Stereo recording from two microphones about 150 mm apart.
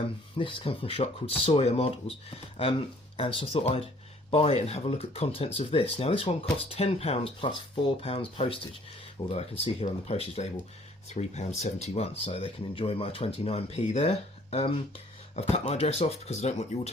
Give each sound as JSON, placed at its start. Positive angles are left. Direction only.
{"t": 0.3, "sound": "speech", "side_deg": 35}